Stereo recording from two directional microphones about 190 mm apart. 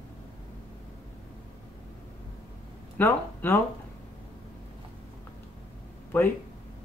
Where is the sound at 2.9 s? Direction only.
10° left (ahead or behind).